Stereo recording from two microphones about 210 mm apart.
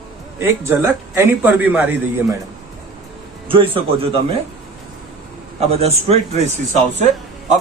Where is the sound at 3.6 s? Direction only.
25° right (ahead or behind).